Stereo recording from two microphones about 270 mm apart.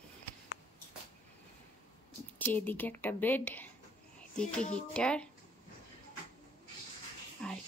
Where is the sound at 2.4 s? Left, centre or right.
Centre.